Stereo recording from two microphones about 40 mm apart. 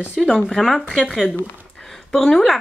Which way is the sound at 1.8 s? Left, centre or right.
Centre.